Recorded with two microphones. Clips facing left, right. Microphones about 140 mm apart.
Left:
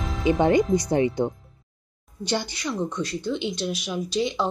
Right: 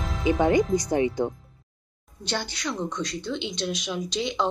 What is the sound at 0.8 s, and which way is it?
Speech, 25° left (ahead or behind).